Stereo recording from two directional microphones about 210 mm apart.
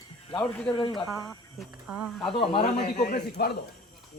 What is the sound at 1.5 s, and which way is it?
Speech, centre (ahead or behind).